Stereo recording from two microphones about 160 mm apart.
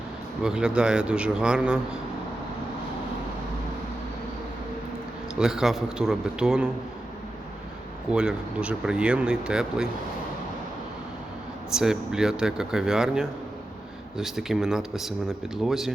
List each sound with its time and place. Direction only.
0.4 s speech: 5° right (ahead or behind)
5.4 s speech: 5° right (ahead or behind)
8.1 s speech: 5° right (ahead or behind)
11.7 s speech: 5° right (ahead or behind)